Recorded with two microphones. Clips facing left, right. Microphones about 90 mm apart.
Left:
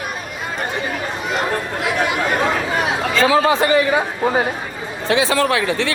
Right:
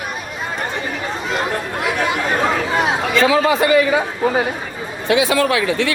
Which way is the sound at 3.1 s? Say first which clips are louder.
Even; 30° left (ahead or behind).